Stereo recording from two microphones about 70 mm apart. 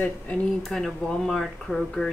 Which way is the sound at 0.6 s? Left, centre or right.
Centre.